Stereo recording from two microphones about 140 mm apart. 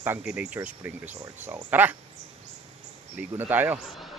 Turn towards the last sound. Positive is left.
turn(degrees=-15)  # may be behind; listen again after turning